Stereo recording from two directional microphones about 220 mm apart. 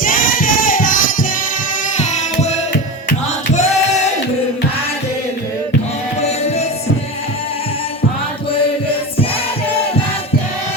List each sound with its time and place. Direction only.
0.0 s a sound: 40° left (ahead or behind)
2.0 s carnatic music: 30° left (ahead or behind)
3.5 s choir: 30° left (ahead or behind)